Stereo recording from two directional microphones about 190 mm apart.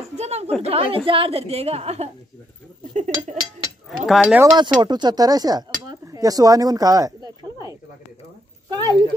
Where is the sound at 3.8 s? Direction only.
Centre (ahead or behind).